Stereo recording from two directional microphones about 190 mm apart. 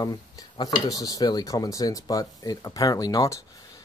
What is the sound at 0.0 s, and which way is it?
Speech, 20° left (ahead or behind).